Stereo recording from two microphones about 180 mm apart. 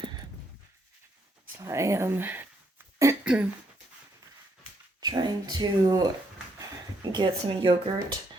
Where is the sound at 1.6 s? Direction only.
15° right (ahead or behind).